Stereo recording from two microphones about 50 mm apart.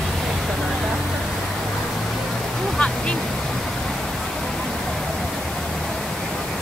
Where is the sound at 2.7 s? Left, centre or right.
Left.